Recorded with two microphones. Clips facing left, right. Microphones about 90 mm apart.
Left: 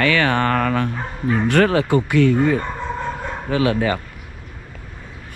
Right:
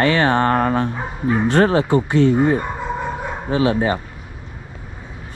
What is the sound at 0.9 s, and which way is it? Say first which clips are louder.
Speech: right 1 dB; 15° right (ahead or behind).